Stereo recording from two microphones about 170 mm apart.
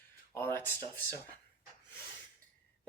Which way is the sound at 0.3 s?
10° left (ahead or behind).